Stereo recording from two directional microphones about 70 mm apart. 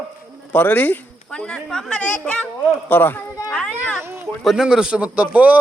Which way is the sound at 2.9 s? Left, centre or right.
Left.